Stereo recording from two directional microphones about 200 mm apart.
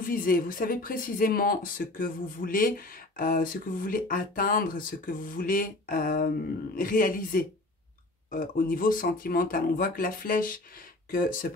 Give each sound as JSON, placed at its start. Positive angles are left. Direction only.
{"t": 0.0, "sound": "speech", "side_deg": 45}